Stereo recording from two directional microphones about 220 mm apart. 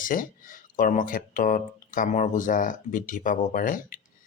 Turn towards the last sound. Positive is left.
turn(degrees=40)  # may be behind; listen again after turning